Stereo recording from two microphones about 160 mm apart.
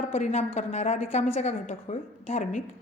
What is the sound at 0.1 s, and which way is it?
A woman's voice, 45° left (ahead or behind).